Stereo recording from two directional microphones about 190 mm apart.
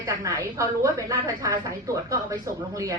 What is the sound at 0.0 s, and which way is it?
A woman's voice, 15° right (ahead or behind).